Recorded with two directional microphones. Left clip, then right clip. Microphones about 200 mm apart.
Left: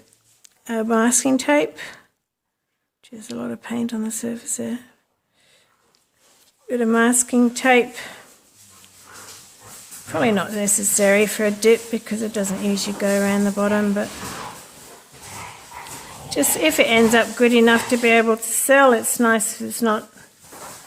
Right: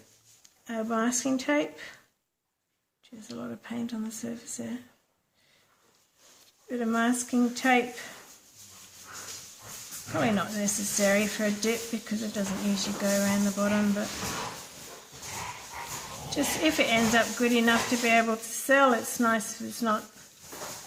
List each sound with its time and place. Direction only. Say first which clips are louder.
0.4 s speech: left 10 dB; 55° left (ahead or behind)
3.0 s speech: left 9 dB; 50° left (ahead or behind)
6.7 s speech: left 10 dB; 50° left (ahead or behind)
10.2 s speech: left 8 dB; 45° left (ahead or behind)
16.3 s speech: left 8 dB; 45° left (ahead or behind)